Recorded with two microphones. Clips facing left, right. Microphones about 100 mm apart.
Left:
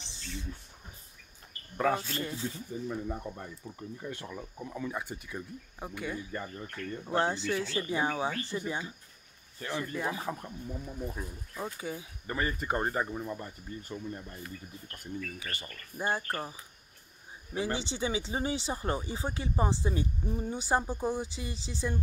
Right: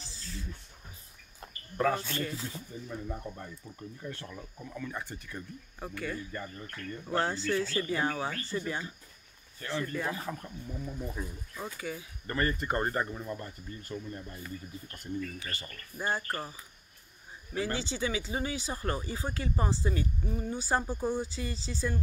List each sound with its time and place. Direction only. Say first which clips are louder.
0.0 s a sound: left 1 dB; 25° left (ahead or behind)
1.8 s speech: even; 10° left (ahead or behind)
12.3 s speech: right 1 dB; 5° left (ahead or behind)
15.3 s speech: even; 10° left (ahead or behind)
17.6 s speech: even; 20° left (ahead or behind)